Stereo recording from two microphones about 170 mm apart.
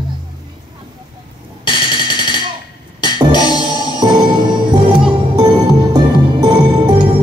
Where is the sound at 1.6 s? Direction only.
30° left (ahead or behind).